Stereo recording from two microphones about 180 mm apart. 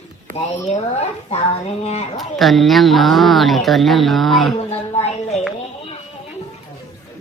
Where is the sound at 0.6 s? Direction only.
40° left (ahead or behind).